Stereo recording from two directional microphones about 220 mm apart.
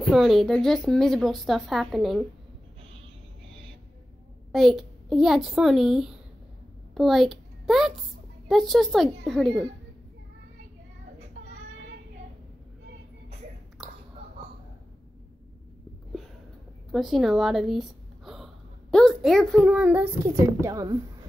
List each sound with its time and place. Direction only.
0.1 s a woman's voice: centre (ahead or behind)
4.5 s a woman's voice: centre (ahead or behind)
13.8 s whispering: centre (ahead or behind)
16.9 s a sound: centre (ahead or behind)
20.6 s a woman's voice: 15° right (ahead or behind)